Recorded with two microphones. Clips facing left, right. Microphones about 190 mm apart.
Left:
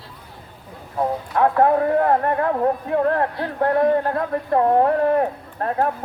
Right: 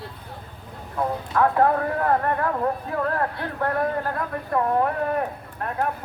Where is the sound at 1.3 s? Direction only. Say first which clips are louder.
Left 3 dB; 30° left (ahead or behind).